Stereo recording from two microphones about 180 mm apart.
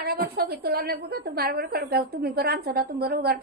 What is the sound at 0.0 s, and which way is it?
A woman's voice, 55° right (ahead or behind).